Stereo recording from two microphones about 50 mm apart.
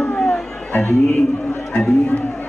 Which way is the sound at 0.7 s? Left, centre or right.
Left.